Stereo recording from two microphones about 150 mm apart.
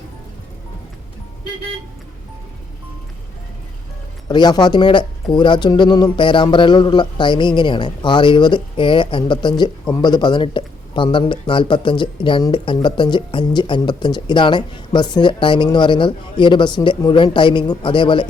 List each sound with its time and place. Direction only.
4.3 s speech: 30° left (ahead or behind)